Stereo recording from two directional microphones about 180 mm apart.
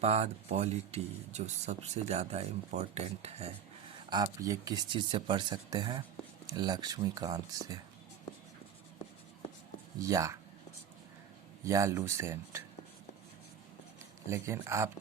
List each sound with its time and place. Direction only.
0.0 s speech: 35° right (ahead or behind)
4.1 s speech: 20° right (ahead or behind)
10.0 s speech: 15° right (ahead or behind)
11.6 s speech: 15° right (ahead or behind)
14.3 s speech: 15° right (ahead or behind)